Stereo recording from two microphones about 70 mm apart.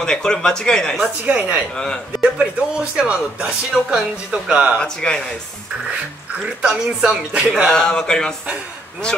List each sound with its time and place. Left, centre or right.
0.0 s speech: centre
1.2 s speech: centre
4.7 s speech: centre
6.4 s speech: centre
7.6 s speech: centre